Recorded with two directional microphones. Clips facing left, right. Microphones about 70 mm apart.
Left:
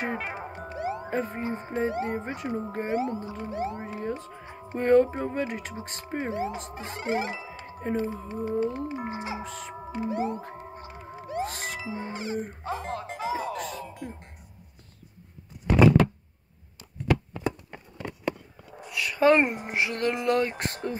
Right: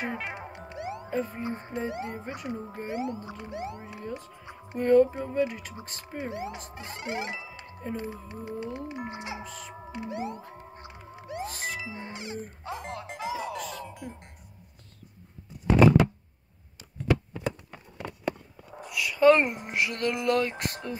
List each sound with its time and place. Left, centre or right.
0.0 s music: left
1.7 s speech: left
9.8 s music: left
13.8 s music: centre
18.8 s a sound: centre
19.1 s speech: centre
19.6 s speech: left